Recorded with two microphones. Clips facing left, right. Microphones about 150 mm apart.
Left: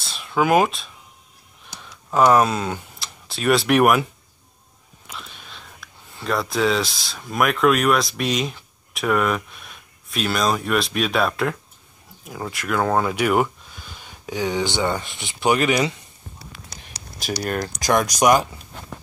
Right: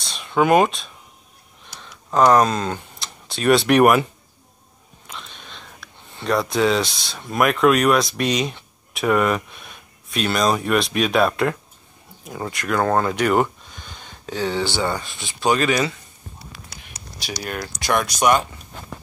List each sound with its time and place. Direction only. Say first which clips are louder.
0.0 s a sound: right 2 dB; 5° left (ahead or behind)
2.1 s speech: right 1 dB; 5° left (ahead or behind)
5.0 s whispering: even; 5° left (ahead or behind)
6.1 s speech: right 3 dB; centre (ahead or behind); by 15.9 s 20° left (ahead or behind)
17.4 s speech: left 4 dB; 40° left (ahead or behind)
17.9 s speech: left 1 dB; 15° left (ahead or behind)